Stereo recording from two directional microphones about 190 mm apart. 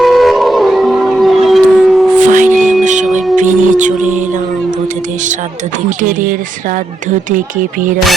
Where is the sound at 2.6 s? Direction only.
5° right (ahead or behind).